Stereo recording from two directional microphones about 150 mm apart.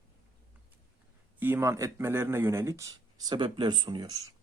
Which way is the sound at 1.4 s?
15° right (ahead or behind).